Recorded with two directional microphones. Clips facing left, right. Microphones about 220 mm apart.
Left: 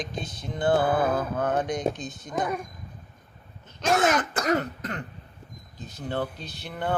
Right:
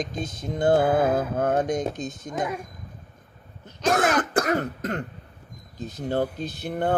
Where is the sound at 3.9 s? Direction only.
50° right (ahead or behind).